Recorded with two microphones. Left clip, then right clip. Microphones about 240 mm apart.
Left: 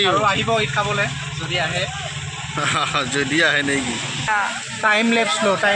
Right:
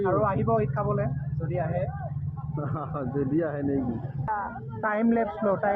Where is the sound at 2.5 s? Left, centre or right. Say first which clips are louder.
Left 14 dB; left.